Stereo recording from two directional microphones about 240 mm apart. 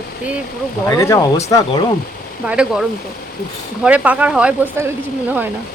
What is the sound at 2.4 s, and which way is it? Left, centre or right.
Speech, centre.